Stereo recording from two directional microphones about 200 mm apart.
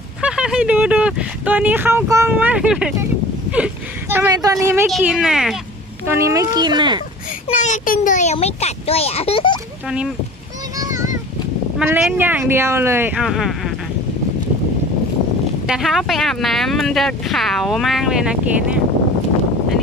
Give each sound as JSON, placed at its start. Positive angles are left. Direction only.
{"t": 0.2, "sound": "speech", "side_deg": -5}
{"t": 4.8, "sound": "speech", "side_deg": 0}
{"t": 6.0, "sound": "speech", "side_deg": -15}
{"t": 7.4, "sound": "a child's voice", "side_deg": 35}
{"t": 9.8, "sound": "speech", "side_deg": -5}
{"t": 10.8, "sound": "a sound", "side_deg": -15}
{"t": 11.8, "sound": "speech", "side_deg": -5}
{"t": 15.6, "sound": "speech", "side_deg": 0}